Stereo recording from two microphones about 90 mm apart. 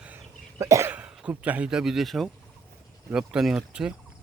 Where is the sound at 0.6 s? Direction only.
35° right (ahead or behind).